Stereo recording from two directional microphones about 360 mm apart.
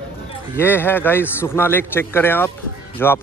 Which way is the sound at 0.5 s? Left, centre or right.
Centre.